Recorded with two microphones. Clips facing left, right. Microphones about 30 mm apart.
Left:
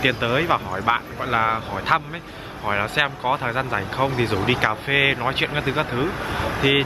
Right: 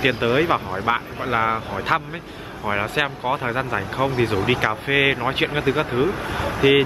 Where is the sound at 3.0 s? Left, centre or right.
Centre.